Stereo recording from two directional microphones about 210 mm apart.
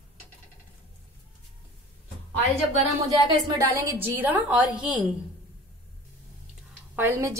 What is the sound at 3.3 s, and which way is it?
Speech, 25° right (ahead or behind).